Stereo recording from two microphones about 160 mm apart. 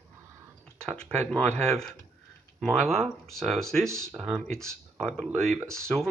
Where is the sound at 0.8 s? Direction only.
5° left (ahead or behind).